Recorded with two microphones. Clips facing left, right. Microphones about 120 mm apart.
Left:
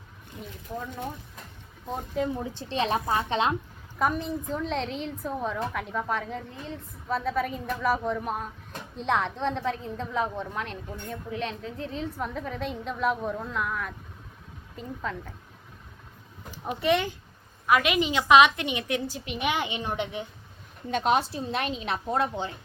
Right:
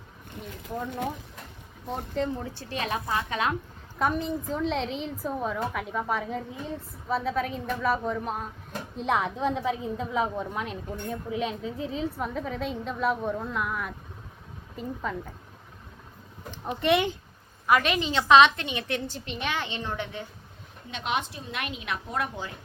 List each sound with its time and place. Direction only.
0.9 s speech: 80° right
2.1 s a woman's voice: 10° left (ahead or behind); by 3.5 s 25° left (ahead or behind)
3.9 s a woman's voice: centre (ahead or behind)
16.5 s a woman's voice: 5° left (ahead or behind)
17.9 s a woman's voice: 10° left (ahead or behind)
20.9 s speech: 40° left (ahead or behind)